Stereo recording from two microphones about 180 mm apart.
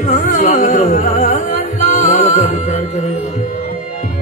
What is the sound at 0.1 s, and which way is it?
Music, 45° left (ahead or behind).